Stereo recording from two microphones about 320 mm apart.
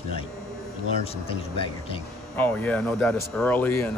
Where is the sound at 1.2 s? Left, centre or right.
Centre.